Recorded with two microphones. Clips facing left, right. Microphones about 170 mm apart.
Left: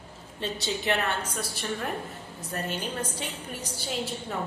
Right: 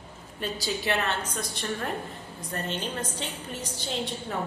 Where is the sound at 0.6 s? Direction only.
15° left (ahead or behind).